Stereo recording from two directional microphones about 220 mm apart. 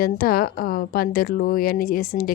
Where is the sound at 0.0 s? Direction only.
40° left (ahead or behind).